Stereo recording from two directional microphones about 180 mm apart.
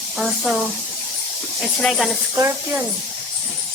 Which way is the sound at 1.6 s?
5° left (ahead or behind).